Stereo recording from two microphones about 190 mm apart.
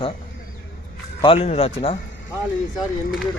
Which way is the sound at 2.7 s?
Centre (ahead or behind).